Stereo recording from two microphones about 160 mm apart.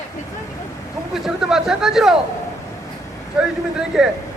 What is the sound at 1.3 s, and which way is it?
Speech, 5° right (ahead or behind).